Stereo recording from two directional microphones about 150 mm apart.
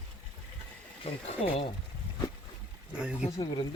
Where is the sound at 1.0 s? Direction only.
35° left (ahead or behind).